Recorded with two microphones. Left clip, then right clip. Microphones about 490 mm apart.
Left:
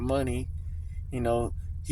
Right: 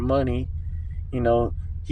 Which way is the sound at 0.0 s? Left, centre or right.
Left.